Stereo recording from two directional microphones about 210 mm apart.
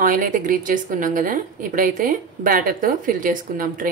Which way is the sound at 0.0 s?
40° right (ahead or behind).